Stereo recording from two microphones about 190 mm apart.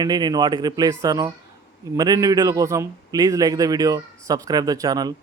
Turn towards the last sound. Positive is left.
turn(degrees=-20)  # may be behind; listen again after turning